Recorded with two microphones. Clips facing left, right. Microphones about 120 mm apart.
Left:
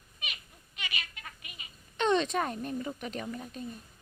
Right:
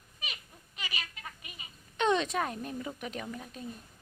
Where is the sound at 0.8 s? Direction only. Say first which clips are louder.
Even; 35° right (ahead or behind).